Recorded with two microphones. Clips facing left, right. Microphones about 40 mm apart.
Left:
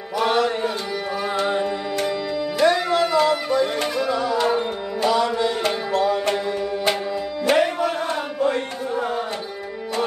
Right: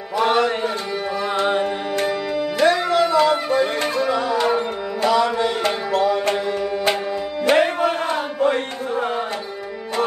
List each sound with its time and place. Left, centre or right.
0.2 s mantra: right
1.3 s music: right
7.4 s music: right